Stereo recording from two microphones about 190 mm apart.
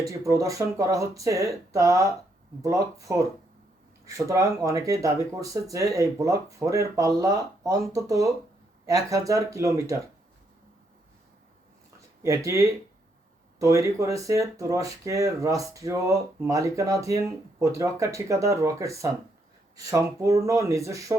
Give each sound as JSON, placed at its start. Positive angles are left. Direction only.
{"t": 0.1, "sound": "speech", "side_deg": -15}
{"t": 12.5, "sound": "speech", "side_deg": -15}